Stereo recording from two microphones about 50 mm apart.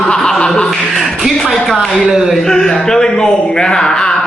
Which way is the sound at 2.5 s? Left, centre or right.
Centre.